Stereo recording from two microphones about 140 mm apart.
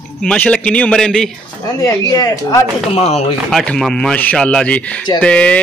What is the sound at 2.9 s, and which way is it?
Speech, 45° left (ahead or behind).